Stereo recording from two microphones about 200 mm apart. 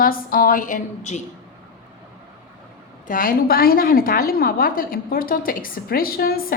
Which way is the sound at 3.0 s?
45° left (ahead or behind).